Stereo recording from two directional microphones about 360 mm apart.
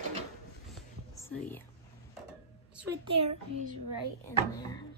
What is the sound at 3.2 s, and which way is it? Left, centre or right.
Speech, right.